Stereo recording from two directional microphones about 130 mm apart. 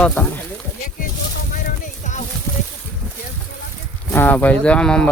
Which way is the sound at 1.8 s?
70° left (ahead or behind).